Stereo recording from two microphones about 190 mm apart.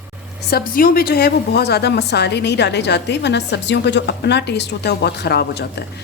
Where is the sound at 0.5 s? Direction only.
50° left (ahead or behind).